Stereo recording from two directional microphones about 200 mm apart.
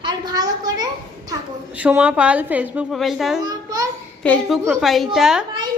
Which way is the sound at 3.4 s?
20° right (ahead or behind).